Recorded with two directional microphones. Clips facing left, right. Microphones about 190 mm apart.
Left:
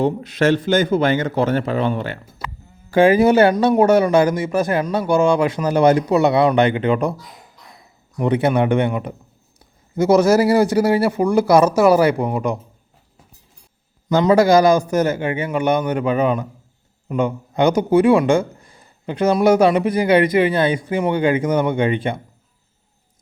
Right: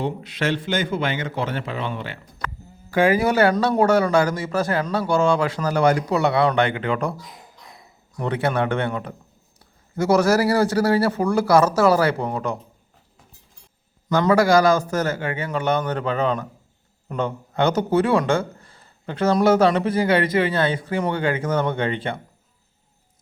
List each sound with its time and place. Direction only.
0.0 s a man's voice: 45° left (ahead or behind)
2.9 s a man's voice: 25° left (ahead or behind)
8.2 s speech: 20° left (ahead or behind)
14.1 s speech: 20° left (ahead or behind)